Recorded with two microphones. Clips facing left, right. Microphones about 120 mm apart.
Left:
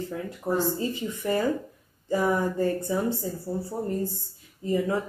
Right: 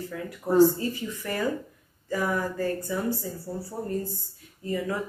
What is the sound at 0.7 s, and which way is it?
Speech, 20° left (ahead or behind).